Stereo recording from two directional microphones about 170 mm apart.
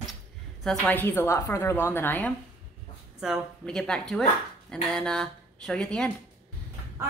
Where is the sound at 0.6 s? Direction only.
5° left (ahead or behind).